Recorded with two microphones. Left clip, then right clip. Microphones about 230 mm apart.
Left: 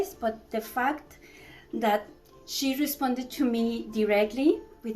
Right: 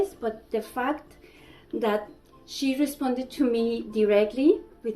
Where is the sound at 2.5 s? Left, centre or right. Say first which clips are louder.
Right 2 dB; left.